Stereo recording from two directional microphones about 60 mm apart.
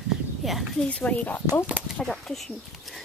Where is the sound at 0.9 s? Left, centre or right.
Left.